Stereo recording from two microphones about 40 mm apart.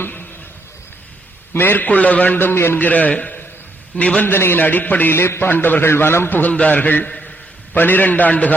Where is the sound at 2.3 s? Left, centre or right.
Left.